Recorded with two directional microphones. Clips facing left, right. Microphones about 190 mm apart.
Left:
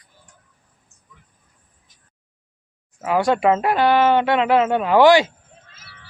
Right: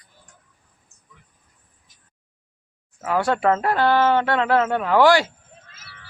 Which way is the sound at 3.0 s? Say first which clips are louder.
Left 3 dB; 15° left (ahead or behind).